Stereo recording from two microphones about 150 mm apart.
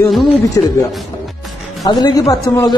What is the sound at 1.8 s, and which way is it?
Speech, 25° left (ahead or behind).